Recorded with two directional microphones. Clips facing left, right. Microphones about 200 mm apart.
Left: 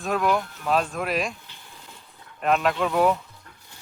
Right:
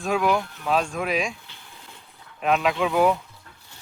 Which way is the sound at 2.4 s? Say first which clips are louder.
Even; centre (ahead or behind).